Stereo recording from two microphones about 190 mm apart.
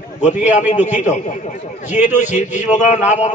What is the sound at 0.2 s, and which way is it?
A man's voice, 40° left (ahead or behind).